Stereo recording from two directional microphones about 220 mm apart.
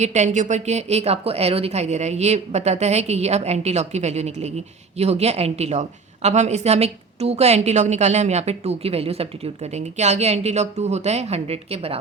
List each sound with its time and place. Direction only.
0.0 s a woman's voice: 30° right (ahead or behind)